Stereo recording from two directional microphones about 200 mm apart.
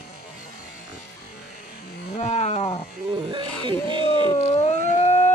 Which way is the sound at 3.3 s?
25° right (ahead or behind).